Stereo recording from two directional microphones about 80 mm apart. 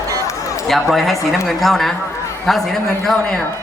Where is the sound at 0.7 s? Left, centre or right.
Centre.